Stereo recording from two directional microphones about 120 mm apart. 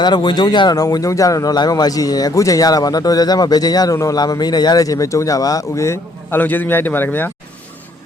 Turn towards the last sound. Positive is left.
turn(degrees=15)  # may be behind; listen again after turning